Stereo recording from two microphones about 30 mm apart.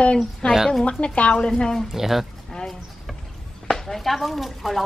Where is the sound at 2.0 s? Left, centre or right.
Centre.